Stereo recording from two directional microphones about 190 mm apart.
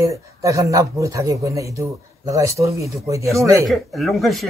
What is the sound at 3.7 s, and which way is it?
Speech, centre (ahead or behind).